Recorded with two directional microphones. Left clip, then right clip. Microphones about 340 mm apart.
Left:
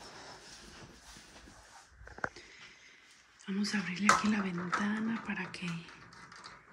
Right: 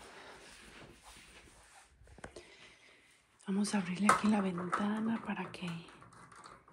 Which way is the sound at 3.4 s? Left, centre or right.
Centre.